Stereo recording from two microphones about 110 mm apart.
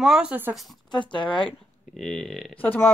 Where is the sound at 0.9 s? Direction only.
45° left (ahead or behind).